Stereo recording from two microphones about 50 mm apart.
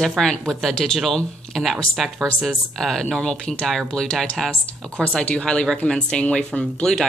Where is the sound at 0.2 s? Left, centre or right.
Centre.